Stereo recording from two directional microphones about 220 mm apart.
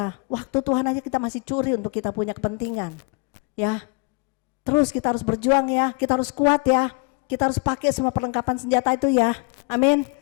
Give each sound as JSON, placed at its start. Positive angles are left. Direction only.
{"t": 0.0, "sound": "a woman's voice", "side_deg": 20}